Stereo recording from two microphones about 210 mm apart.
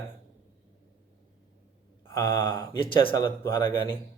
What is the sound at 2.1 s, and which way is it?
A man's voice, 20° left (ahead or behind).